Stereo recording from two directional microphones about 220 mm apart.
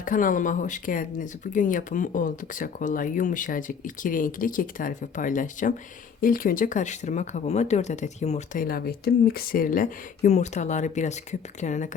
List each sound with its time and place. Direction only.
0.0 s speech: 40° left (ahead or behind)